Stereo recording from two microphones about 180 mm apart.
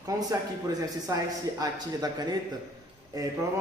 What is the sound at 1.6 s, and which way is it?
A man's voice, 20° right (ahead or behind).